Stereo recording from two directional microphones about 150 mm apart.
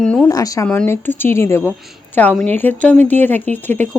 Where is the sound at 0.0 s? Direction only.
5° left (ahead or behind).